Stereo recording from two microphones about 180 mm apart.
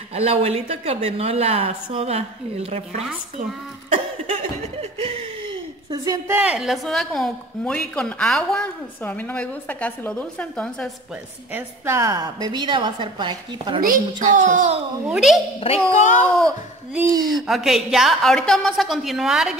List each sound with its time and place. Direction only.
0.1 s a woman's voice: 35° right (ahead or behind)
5.9 s a woman's voice: 20° right (ahead or behind); by 10.9 s 5° left (ahead or behind)
11.5 s a woman's voice: 15° right (ahead or behind)
13.7 s a woman's voice: 50° right (ahead or behind)
15.0 s a woman's voice: centre (ahead or behind)
15.6 s speech: 40° left (ahead or behind)
17.3 s a woman's voice: centre (ahead or behind)